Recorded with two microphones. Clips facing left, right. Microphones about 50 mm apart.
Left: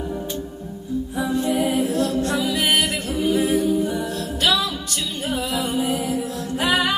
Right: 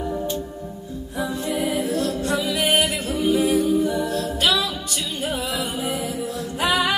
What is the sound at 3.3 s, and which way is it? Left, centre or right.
A capella, left.